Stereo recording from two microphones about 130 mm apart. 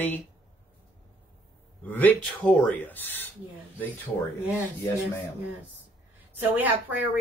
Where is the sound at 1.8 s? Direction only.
15° left (ahead or behind).